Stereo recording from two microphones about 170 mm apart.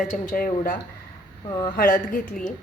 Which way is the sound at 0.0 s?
50° left (ahead or behind).